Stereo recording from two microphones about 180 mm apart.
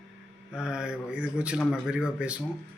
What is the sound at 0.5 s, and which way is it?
A man's voice, 5° right (ahead or behind).